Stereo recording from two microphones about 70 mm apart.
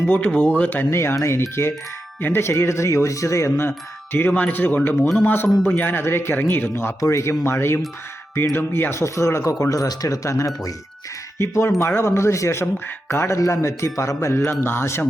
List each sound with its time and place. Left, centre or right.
0.0 s speech: left
0.9 s speech: left
7.0 s speech: left
11.3 s speech: left